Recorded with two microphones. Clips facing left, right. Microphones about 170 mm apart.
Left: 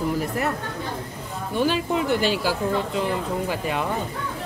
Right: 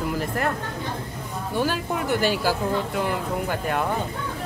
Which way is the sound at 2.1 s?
50° right (ahead or behind).